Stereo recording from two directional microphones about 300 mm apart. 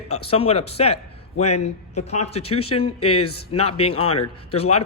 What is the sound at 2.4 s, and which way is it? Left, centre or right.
Speech, left.